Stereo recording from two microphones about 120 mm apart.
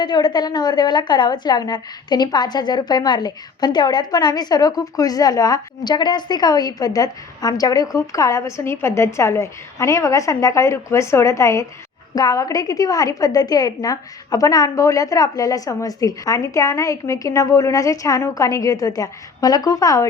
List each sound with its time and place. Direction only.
0.0 s a woman's voice: 40° left (ahead or behind)